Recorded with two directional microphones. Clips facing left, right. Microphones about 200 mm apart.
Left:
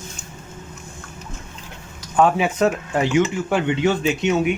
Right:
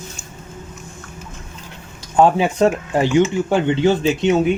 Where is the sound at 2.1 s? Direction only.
30° right (ahead or behind).